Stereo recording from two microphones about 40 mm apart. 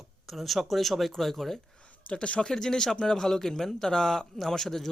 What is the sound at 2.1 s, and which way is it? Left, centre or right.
Speech, left.